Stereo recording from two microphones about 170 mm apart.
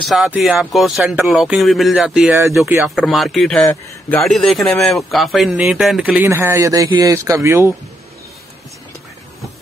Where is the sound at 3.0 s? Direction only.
Centre (ahead or behind).